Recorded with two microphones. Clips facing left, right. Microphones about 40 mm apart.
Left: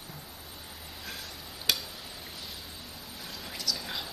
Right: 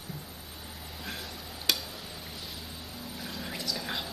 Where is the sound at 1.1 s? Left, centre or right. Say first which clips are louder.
Right 3 dB; centre.